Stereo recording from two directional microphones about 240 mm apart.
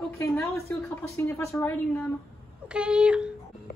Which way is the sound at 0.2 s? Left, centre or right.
Centre.